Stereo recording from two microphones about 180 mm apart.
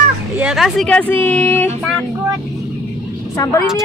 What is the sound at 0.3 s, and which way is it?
Speech, 5° right (ahead or behind).